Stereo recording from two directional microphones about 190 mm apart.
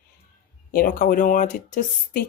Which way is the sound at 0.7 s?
50° left (ahead or behind).